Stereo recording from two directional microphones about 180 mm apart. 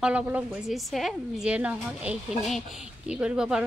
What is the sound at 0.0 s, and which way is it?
A woman's voice, 5° right (ahead or behind).